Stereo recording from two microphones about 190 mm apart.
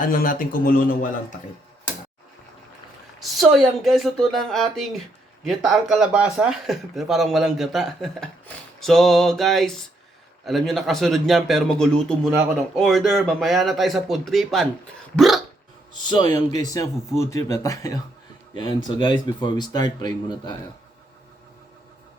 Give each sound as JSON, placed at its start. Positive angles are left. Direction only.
{"t": 0.1, "sound": "a man's voice", "side_deg": 50}
{"t": 3.2, "sound": "speech", "side_deg": 0}
{"t": 16.3, "sound": "speech", "side_deg": 20}